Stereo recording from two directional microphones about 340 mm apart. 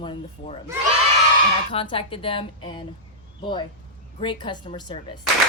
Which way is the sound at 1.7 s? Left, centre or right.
Centre.